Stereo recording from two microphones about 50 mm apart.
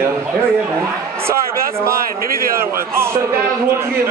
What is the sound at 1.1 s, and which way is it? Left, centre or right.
A man's voice, right.